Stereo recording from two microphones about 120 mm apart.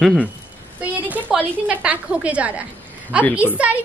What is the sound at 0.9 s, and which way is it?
A woman's voice, 15° right (ahead or behind).